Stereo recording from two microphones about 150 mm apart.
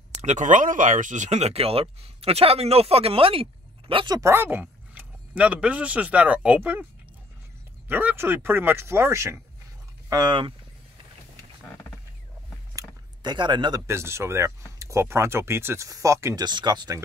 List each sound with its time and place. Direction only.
0.2 s speech: 55° right (ahead or behind); by 6.9 s 10° right (ahead or behind)
7.9 s speech: 10° right (ahead or behind); by 10.5 s 30° right (ahead or behind)
12.7 s speech: 30° right (ahead or behind)